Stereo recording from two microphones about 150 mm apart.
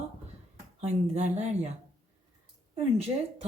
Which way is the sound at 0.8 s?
50° right (ahead or behind).